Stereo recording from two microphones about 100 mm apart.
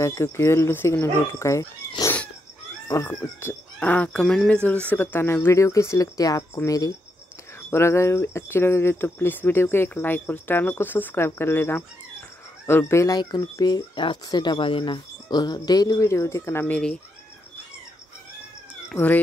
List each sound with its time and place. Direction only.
0.0 s speech: 30° left (ahead or behind)
4.2 s speech: 5° left (ahead or behind)
4.8 s speech: 20° left (ahead or behind)
13.1 s speech: 45° left (ahead or behind)
16.6 s speech: 10° left (ahead or behind)
18.9 s speech: 15° left (ahead or behind)